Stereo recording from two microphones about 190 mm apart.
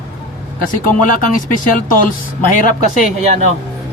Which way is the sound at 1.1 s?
45° left (ahead or behind).